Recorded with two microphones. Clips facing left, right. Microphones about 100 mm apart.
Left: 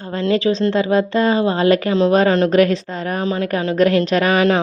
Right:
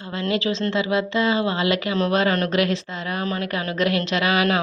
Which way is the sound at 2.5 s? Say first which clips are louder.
Left 7 dB; 40° left (ahead or behind).